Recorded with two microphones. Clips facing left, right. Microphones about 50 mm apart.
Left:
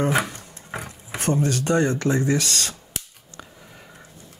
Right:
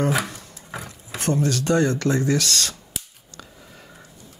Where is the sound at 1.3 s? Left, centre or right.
Left.